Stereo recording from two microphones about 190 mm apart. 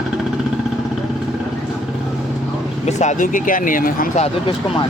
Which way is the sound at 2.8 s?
40° left (ahead or behind).